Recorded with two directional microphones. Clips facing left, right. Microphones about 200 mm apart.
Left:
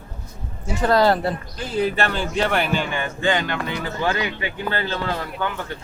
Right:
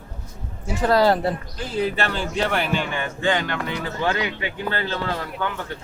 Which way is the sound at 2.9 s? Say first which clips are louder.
Left 1 dB; 10° left (ahead or behind).